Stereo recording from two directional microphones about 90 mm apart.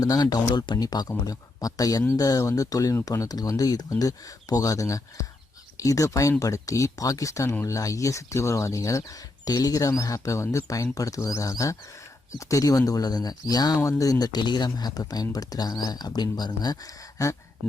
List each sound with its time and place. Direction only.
0.0 s speech: 45° left (ahead or behind)